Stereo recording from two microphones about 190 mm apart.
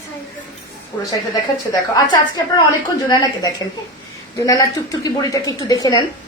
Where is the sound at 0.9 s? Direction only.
15° left (ahead or behind).